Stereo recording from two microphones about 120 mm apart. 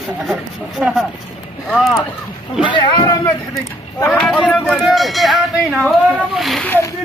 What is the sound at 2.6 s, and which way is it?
Speech, 40° left (ahead or behind).